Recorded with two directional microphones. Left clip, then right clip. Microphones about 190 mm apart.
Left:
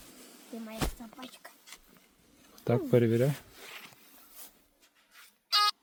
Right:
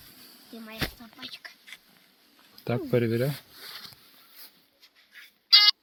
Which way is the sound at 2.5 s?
15° left (ahead or behind).